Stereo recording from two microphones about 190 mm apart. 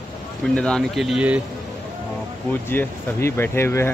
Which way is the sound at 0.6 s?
5° left (ahead or behind).